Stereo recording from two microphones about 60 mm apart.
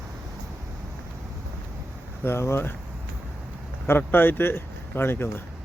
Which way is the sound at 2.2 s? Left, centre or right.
Left.